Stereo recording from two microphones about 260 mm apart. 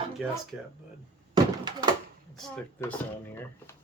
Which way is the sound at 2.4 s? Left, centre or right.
Centre.